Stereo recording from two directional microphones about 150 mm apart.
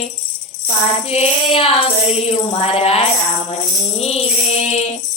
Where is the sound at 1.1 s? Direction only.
40° left (ahead or behind).